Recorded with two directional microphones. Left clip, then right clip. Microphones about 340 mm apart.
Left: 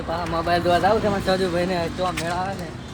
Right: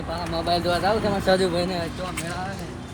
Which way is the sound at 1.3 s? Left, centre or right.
Centre.